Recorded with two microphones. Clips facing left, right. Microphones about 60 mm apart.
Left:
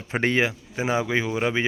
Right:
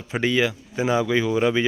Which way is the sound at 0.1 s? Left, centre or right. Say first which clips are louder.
Right 1 dB; left.